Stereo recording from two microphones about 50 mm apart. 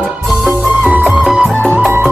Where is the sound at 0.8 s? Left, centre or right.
Right.